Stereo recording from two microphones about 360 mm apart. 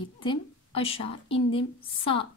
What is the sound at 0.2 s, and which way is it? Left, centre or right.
A woman's voice, centre.